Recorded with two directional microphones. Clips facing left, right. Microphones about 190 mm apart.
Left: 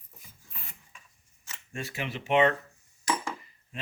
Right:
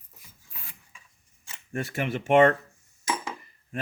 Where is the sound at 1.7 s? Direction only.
50° right (ahead or behind).